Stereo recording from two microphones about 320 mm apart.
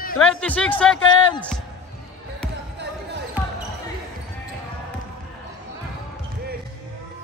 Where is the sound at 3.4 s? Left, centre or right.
Centre.